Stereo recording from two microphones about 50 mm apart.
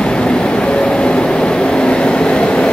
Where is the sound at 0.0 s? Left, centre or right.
Centre.